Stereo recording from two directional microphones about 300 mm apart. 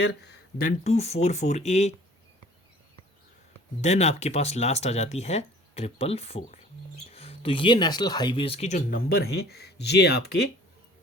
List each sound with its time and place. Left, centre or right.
0.0 s speech: left
0.9 s speech: left
3.8 s speech: left